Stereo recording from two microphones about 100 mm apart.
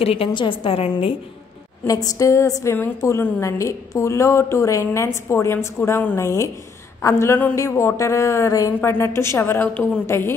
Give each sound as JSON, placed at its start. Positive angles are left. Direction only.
{"t": 0.0, "sound": "a woman's voice", "side_deg": 75}
{"t": 0.3, "sound": "a woman's voice", "side_deg": 55}
{"t": 1.9, "sound": "a woman's voice", "side_deg": 35}